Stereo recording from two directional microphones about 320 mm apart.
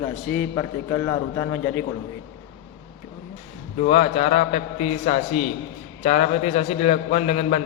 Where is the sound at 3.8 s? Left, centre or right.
Centre.